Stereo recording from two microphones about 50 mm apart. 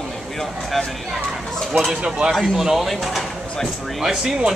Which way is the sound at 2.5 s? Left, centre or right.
Centre.